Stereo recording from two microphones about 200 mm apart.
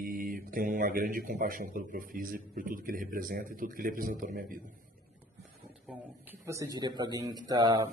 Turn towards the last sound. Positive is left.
turn(degrees=-20)  # may be behind; listen again after turning